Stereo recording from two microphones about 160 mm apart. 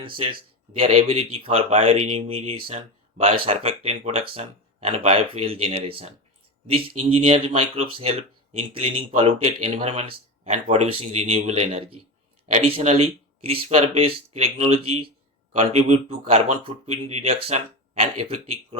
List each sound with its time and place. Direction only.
0.0 s speech: 30° right (ahead or behind)